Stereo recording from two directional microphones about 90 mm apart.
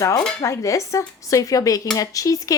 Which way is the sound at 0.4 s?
35° left (ahead or behind).